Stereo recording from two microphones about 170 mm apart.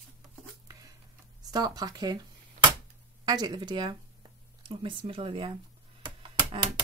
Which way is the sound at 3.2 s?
25° right (ahead or behind).